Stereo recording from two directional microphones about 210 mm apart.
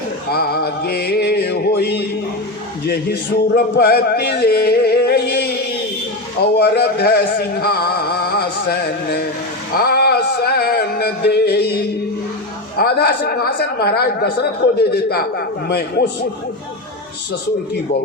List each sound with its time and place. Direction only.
0.3 s music: 50° left (ahead or behind)
2.8 s a sound: 50° left (ahead or behind)
6.4 s music: 50° left (ahead or behind)